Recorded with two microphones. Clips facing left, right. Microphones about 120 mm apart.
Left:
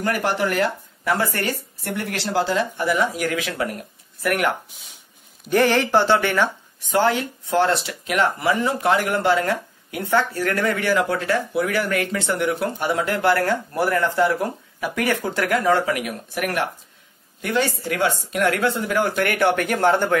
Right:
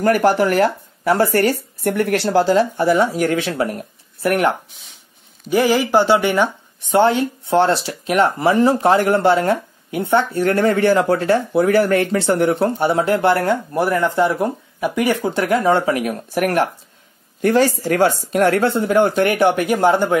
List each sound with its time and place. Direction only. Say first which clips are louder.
0.0 s speech: right 7 dB; 40° right (ahead or behind)
5.5 s speech: right 2 dB; 5° right (ahead or behind)
6.9 s speech: right 5 dB; 25° right (ahead or behind)